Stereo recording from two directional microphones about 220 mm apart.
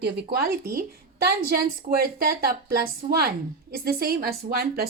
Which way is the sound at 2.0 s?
45° right (ahead or behind).